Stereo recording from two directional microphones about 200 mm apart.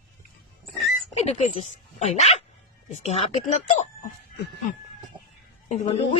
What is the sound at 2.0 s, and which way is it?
Speech, 35° left (ahead or behind).